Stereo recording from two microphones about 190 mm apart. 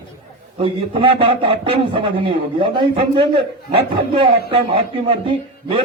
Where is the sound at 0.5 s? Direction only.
30° right (ahead or behind).